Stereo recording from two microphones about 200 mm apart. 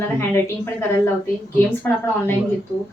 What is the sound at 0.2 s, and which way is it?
Speech, 10° left (ahead or behind).